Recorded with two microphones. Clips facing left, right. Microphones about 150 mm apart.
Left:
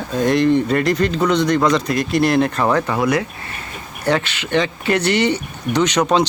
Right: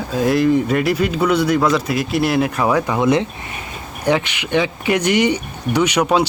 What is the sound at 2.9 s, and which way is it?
Speech, 25° right (ahead or behind).